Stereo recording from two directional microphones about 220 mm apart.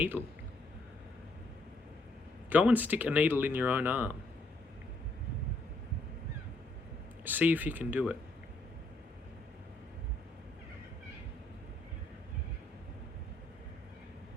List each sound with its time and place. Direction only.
0.2 s speech: 5° right (ahead or behind)
2.5 s speech: 5° right (ahead or behind)
7.3 s speech: 10° right (ahead or behind)